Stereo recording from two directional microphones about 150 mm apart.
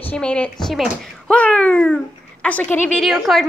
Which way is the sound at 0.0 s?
10° left (ahead or behind).